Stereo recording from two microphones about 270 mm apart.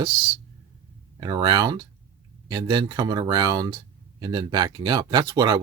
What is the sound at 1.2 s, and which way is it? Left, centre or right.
Speech, centre.